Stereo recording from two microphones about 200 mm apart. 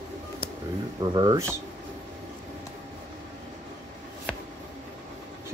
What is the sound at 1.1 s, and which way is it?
Speech, 20° right (ahead or behind).